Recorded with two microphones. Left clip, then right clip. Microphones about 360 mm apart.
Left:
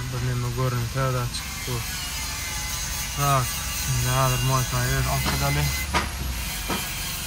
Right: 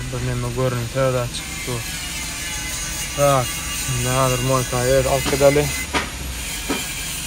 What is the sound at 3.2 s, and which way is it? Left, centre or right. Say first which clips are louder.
Speech: right 7 dB; right.